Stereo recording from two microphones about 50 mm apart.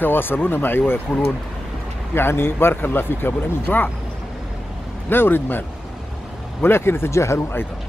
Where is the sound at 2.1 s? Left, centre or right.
Left.